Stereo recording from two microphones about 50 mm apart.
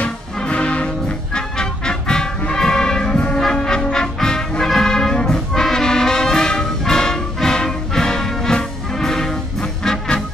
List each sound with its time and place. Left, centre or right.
0.4 s music: left
5.5 s brass instrument: centre